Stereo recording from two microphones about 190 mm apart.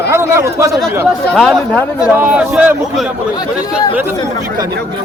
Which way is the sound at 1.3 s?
5° left (ahead or behind).